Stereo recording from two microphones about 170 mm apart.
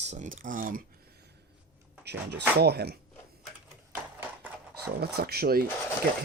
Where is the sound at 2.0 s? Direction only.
80° right.